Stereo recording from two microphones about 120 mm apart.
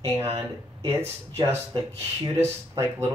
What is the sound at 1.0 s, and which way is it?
Speech, 20° right (ahead or behind).